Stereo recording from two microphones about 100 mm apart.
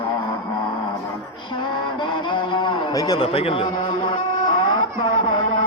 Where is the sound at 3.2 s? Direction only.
70° left (ahead or behind).